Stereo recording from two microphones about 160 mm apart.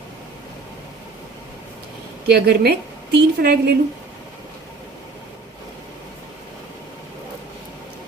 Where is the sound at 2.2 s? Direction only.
85° right.